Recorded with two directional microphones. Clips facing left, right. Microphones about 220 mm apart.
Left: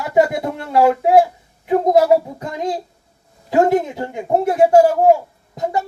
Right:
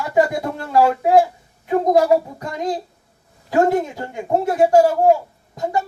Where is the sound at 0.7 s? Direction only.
20° left (ahead or behind).